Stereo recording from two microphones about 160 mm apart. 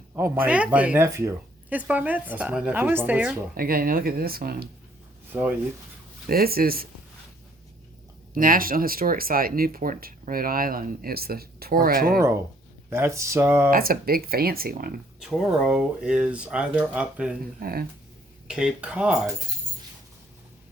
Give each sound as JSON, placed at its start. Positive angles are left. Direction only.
{"t": 0.4, "sound": "speech", "side_deg": -10}
{"t": 3.6, "sound": "speech", "side_deg": -65}
{"t": 5.3, "sound": "speech", "side_deg": -10}
{"t": 6.2, "sound": "speech", "side_deg": -70}
{"t": 8.3, "sound": "speech", "side_deg": -60}
{"t": 12.9, "sound": "speech", "side_deg": -15}
{"t": 13.7, "sound": "speech", "side_deg": -65}
{"t": 15.2, "sound": "speech", "side_deg": 0}
{"t": 17.6, "sound": "speech", "side_deg": -70}
{"t": 18.4, "sound": "speech", "side_deg": -5}